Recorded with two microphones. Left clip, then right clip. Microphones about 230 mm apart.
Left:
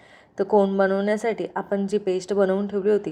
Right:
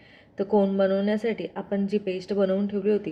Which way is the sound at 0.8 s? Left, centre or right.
Centre.